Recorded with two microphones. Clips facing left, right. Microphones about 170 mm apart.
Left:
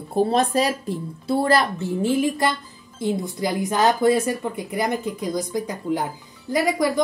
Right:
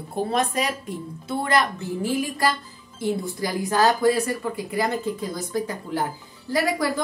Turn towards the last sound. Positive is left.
turn(degrees=15)  # may be behind; listen again after turning